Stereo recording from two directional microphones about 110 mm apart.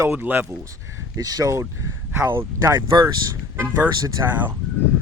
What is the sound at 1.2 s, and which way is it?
Speech, 35° right (ahead or behind).